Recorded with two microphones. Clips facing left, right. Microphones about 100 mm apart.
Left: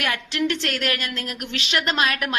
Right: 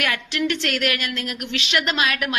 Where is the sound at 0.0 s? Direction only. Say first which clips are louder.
Even; 30° left (ahead or behind).